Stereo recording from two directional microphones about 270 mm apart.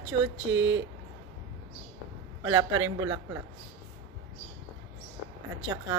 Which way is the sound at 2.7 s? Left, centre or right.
Right.